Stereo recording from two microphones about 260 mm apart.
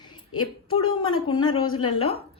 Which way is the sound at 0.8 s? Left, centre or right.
Left.